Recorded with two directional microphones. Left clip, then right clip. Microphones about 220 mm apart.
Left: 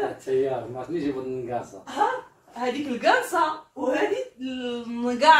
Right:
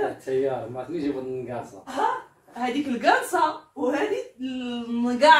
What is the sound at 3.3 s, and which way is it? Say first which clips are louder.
Speech: right 1 dB; centre (ahead or behind).